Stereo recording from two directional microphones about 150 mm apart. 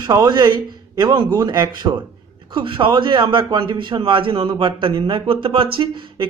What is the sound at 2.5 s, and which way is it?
Speech, 35° right (ahead or behind).